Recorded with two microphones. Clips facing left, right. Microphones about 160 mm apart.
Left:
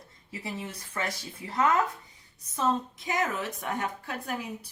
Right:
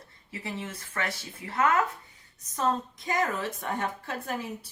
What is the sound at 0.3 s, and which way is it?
Speech, 15° left (ahead or behind).